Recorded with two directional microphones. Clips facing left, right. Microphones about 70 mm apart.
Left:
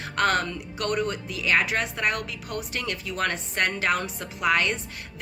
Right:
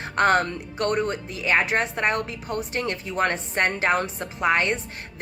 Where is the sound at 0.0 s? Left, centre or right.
Right.